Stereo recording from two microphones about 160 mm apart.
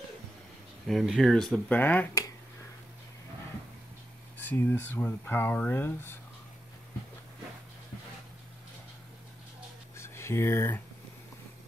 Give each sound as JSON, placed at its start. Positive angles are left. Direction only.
{"t": 0.8, "sound": "speech", "side_deg": 0}
{"t": 4.4, "sound": "speech", "side_deg": 10}
{"t": 9.9, "sound": "a sound", "side_deg": 15}